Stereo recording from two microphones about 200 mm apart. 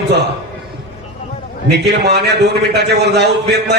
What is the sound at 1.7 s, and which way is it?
A man's voice, 55° right (ahead or behind).